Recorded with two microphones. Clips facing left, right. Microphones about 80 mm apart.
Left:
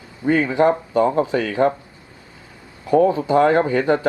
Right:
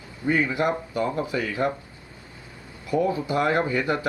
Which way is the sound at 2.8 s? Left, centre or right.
Left.